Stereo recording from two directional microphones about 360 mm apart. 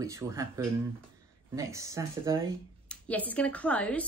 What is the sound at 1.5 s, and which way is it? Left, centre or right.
Speech, centre.